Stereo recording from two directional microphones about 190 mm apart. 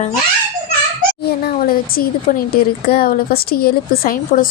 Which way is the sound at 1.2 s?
50° left (ahead or behind).